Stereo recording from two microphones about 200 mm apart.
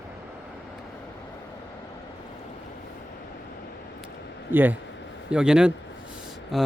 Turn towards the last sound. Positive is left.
turn(degrees=0)  # may be behind; listen again after turning